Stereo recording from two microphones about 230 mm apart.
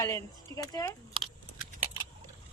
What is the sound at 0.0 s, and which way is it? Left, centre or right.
Speech, centre.